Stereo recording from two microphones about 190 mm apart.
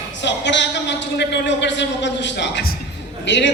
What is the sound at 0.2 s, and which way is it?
A man's voice, 70° left (ahead or behind).